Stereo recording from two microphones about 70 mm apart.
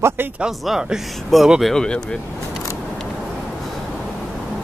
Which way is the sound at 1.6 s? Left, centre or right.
Centre.